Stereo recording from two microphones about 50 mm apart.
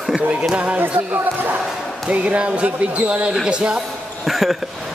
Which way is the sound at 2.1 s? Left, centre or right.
Right.